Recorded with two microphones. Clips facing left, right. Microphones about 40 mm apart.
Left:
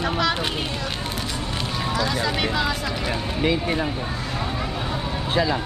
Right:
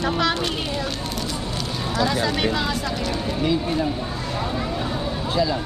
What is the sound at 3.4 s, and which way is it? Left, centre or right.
Speech, left.